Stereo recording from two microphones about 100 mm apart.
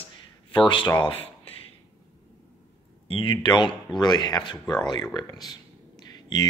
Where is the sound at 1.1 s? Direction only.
70° left (ahead or behind).